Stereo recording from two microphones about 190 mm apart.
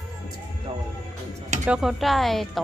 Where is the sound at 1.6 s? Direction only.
5° right (ahead or behind).